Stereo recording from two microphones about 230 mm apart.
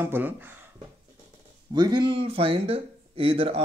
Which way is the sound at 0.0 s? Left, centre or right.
Centre.